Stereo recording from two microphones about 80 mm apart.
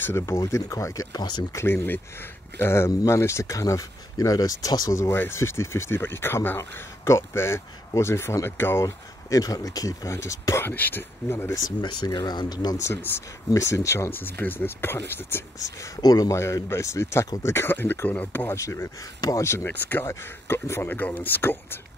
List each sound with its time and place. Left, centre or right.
0.0 s speech: left
0.4 s speech: left
1.1 s speech: left
1.5 s speech: left
4.9 s speech: left
8.8 s speech: left
10.7 s speech: left
12.1 s speech: left
12.8 s speech: left
14.1 s speech: left
16.0 s speech: left
16.3 s speech: left
18.5 s speech: left
19.7 s speech: left